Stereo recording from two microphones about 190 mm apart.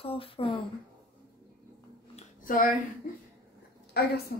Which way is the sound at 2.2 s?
45° left (ahead or behind).